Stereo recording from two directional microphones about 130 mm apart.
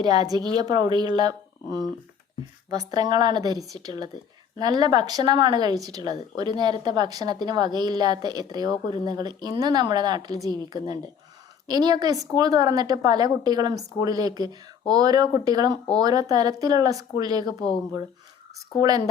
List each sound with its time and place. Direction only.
0.0 s a woman's voice: 30° right (ahead or behind)
18.8 s speech: 30° right (ahead or behind)